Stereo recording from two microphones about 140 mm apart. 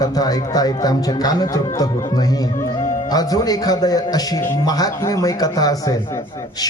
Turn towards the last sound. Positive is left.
turn(degrees=25)  # may be behind; listen again after turning